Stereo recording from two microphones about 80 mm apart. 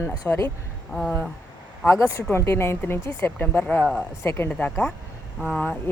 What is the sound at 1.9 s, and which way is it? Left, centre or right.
A woman's voice, left.